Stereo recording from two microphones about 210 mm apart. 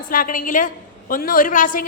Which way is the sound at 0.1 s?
40° left (ahead or behind).